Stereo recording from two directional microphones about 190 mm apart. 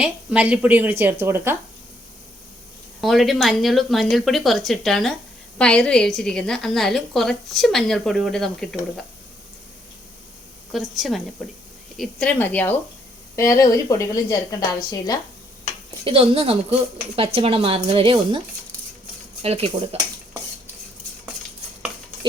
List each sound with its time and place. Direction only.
0.0 s speech: 5° right (ahead or behind)
3.0 s a woman's voice: centre (ahead or behind)
10.7 s a woman's voice: centre (ahead or behind); by 15.2 s 20° left (ahead or behind)
16.0 s speech: 30° right (ahead or behind)
19.4 s speech: 30° right (ahead or behind)